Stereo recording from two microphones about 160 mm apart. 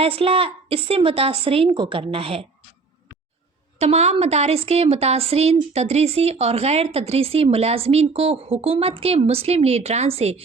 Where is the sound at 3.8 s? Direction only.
40° right (ahead or behind).